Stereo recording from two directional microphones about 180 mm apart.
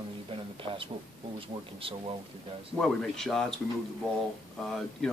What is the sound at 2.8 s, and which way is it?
Speech, centre (ahead or behind).